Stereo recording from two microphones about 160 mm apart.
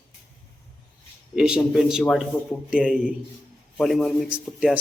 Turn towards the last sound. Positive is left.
turn(degrees=-5)  # may be behind; listen again after turning